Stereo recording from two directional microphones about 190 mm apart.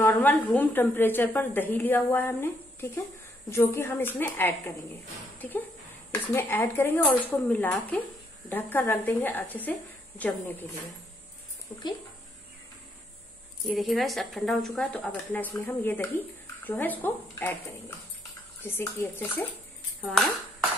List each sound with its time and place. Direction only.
0.0 s a woman's voice: 10° left (ahead or behind)
6.3 s a woman's voice: 10° left (ahead or behind)
11.7 s a woman's voice: 20° left (ahead or behind)
13.7 s a woman's voice: centre (ahead or behind)